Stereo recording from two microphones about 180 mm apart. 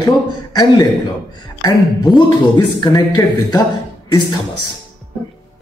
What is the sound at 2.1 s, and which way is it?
A man's voice, 20° left (ahead or behind).